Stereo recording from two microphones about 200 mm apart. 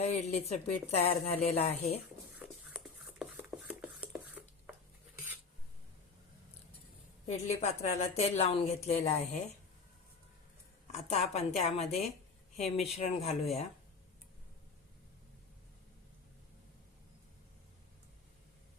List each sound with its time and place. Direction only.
0.0 s a woman's voice: 30° left (ahead or behind)
2.7 s a sound: centre (ahead or behind)
7.3 s a woman's voice: 35° left (ahead or behind)
10.9 s a woman's voice: 30° left (ahead or behind)